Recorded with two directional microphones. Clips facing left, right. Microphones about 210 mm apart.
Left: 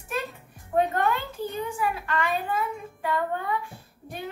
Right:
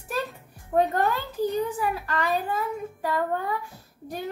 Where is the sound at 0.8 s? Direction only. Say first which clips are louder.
Right 1 dB; 40° right (ahead or behind).